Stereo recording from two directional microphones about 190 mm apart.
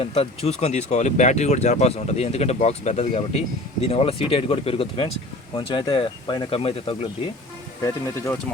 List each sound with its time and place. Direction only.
0.0 s speech: 30° left (ahead or behind)
8.0 s speech: 15° left (ahead or behind)